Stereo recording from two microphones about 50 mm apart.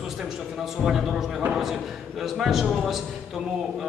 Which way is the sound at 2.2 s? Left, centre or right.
Centre.